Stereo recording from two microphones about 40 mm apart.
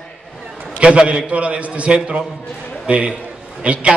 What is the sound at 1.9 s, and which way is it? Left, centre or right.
Speech, right.